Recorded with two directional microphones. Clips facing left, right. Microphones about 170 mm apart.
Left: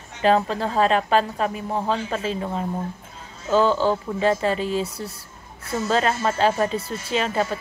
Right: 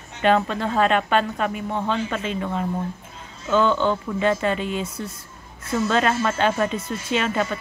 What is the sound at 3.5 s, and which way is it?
Speech, 35° left (ahead or behind).